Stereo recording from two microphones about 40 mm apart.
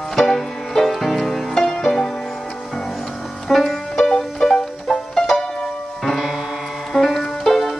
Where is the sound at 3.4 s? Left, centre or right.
Centre.